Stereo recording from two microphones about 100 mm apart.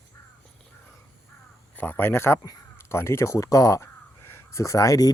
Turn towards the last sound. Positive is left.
turn(degrees=35)  # may be behind; listen again after turning